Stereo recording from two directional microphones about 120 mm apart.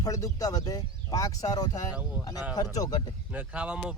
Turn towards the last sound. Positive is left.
turn(degrees=-10)  # may be behind; listen again after turning